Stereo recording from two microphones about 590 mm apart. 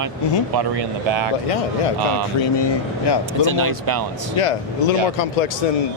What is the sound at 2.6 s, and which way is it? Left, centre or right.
Speech, left.